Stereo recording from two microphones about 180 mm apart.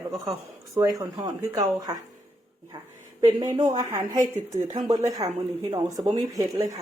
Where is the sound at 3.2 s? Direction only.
20° right (ahead or behind).